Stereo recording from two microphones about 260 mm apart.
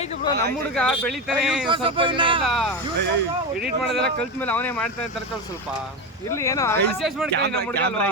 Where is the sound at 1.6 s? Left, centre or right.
Centre.